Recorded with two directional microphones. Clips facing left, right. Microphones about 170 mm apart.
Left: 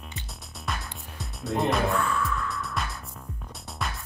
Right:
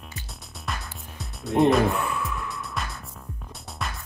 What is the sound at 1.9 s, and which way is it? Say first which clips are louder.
Music: left 1 dB; 20° right (ahead or behind).